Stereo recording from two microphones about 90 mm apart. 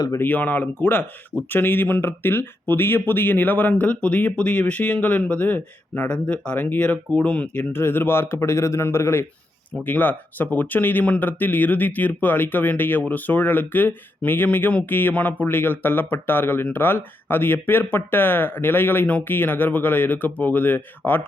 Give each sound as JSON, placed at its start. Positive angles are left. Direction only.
{"t": 0.1, "sound": "speech", "side_deg": 20}